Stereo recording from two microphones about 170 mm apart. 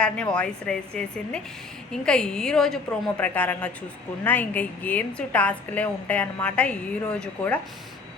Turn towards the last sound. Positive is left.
turn(degrees=10)  # may be behind; listen again after turning